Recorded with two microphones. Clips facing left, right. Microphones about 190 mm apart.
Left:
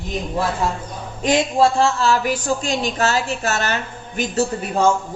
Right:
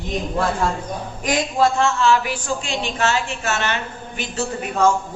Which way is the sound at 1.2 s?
25° left (ahead or behind).